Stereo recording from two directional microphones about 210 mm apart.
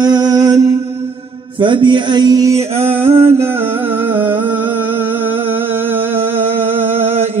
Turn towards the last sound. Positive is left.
turn(degrees=-10)  # may be behind; listen again after turning